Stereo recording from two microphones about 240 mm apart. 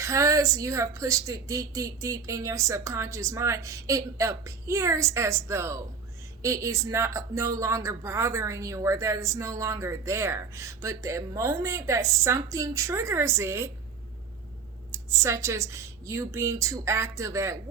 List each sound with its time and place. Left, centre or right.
0.0 s speech: centre
14.9 s speech: centre